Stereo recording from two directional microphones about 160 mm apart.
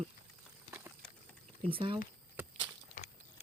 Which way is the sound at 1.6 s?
35° right (ahead or behind).